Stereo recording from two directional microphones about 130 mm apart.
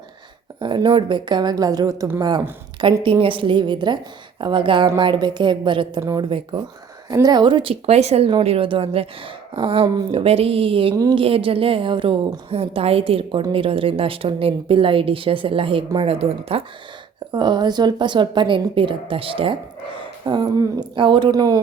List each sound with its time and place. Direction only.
0.6 s a woman's voice: 35° right (ahead or behind)
6.0 s speech: 25° right (ahead or behind)
6.2 s a woman's voice: 40° right (ahead or behind)
7.1 s a woman's voice: 30° right (ahead or behind); by 16.6 s 50° right (ahead or behind)
17.3 s a woman's voice: 35° right (ahead or behind)